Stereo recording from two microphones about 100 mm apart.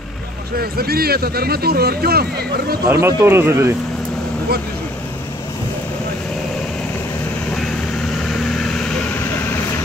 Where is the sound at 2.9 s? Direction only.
30° right (ahead or behind).